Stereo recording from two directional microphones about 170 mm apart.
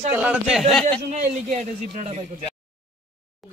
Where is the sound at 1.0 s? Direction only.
45° right (ahead or behind).